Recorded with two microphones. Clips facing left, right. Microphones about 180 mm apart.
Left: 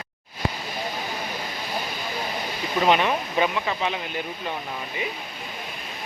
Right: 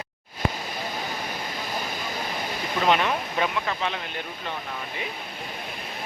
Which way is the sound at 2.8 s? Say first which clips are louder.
Left 2 dB; 5° left (ahead or behind).